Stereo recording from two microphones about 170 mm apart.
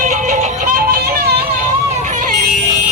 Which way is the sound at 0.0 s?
45° right (ahead or behind).